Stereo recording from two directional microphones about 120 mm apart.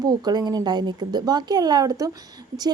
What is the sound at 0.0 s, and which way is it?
A woman's voice, 35° right (ahead or behind).